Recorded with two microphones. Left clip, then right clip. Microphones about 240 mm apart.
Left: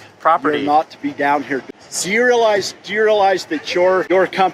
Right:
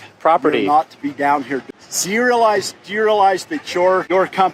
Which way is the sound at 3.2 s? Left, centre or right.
Right.